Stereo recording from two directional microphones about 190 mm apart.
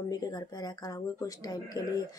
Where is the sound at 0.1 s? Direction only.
20° left (ahead or behind).